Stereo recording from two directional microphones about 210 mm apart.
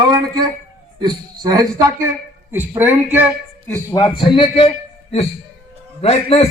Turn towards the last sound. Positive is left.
turn(degrees=30)  # may be behind; listen again after turning